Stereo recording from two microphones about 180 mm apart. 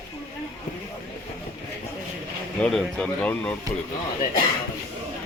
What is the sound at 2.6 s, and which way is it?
Speech, centre (ahead or behind).